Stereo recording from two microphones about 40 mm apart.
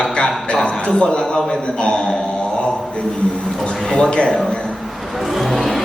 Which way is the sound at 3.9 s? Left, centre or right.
Left.